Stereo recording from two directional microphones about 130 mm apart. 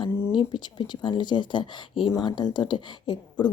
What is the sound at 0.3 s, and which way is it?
A woman's voice, 35° left (ahead or behind).